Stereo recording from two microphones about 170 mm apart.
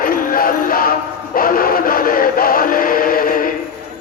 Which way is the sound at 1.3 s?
55° left (ahead or behind).